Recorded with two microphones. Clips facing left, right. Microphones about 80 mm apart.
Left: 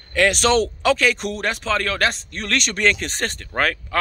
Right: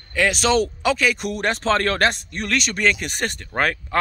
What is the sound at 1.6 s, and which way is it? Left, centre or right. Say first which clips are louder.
Speech: right 4 dB; right.